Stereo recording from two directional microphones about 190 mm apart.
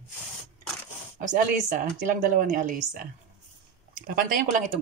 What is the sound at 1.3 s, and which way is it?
A woman's voice, 40° right (ahead or behind).